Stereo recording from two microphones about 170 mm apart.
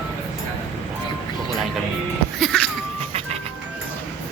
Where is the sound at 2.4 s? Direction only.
5° left (ahead or behind).